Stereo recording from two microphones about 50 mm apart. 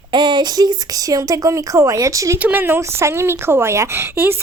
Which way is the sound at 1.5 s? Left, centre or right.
Right.